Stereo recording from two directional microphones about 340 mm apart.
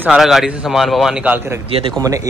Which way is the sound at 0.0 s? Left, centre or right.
Centre.